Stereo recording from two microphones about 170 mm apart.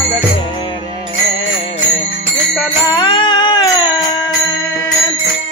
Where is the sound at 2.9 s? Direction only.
25° left (ahead or behind).